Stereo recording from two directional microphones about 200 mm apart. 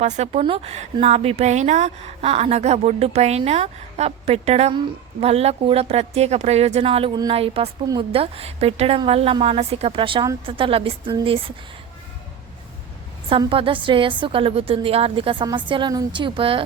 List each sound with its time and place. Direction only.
0.0 s a woman's voice: 35° right (ahead or behind)
13.3 s a woman's voice: 25° right (ahead or behind)